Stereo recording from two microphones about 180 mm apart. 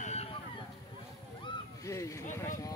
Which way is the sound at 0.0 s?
35° left (ahead or behind).